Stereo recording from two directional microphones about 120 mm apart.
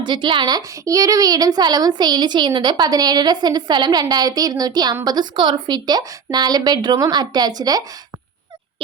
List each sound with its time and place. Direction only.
0.0 s a woman's voice: 40° right (ahead or behind)